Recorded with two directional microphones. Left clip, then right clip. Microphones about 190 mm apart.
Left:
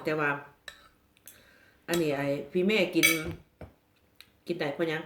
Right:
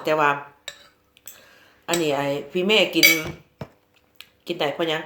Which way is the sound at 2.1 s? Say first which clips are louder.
Right 6 dB; 35° right (ahead or behind).